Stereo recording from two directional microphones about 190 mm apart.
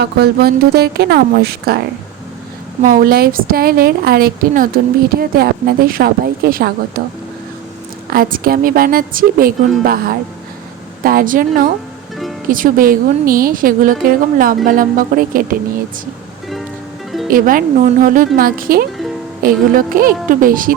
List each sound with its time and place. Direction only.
0.0 s a woman's voice: 55° right (ahead or behind)
2.8 s a woman's voice: 50° right (ahead or behind)
8.1 s a woman's voice: 50° right (ahead or behind)
17.2 s a woman's voice: 45° right (ahead or behind)